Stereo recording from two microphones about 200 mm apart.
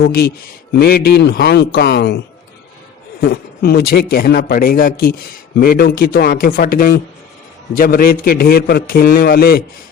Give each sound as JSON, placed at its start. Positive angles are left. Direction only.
{"t": 0.0, "sound": "a man's voice", "side_deg": 50}
{"t": 3.2, "sound": "a man's voice", "side_deg": 50}